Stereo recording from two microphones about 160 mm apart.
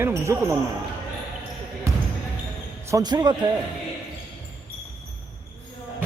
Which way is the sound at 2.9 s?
25° right (ahead or behind).